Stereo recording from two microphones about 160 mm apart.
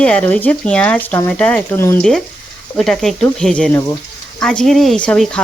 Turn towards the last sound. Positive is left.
turn(degrees=5)  # may be behind; listen again after turning